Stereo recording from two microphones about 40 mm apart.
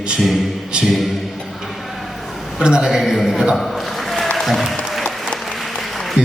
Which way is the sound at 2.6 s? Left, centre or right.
Centre.